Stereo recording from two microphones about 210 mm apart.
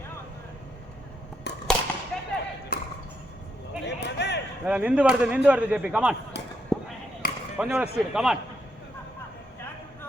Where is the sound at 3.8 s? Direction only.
55° left (ahead or behind).